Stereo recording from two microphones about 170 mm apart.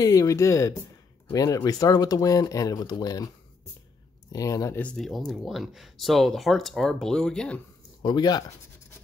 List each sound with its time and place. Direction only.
0.0 s speech: 20° left (ahead or behind)
4.3 s speech: 20° left (ahead or behind)
8.0 s speech: 25° left (ahead or behind)